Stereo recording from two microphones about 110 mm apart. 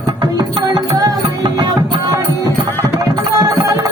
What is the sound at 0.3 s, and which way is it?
Music, 35° right (ahead or behind).